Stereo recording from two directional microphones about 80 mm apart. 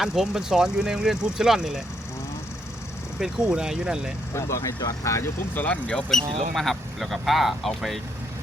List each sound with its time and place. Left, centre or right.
0.0 s speech: centre
3.2 s speech: centre
4.4 s speech: left
5.5 s speech: centre